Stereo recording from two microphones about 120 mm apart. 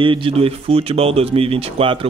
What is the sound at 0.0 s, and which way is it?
Speech, 45° right (ahead or behind).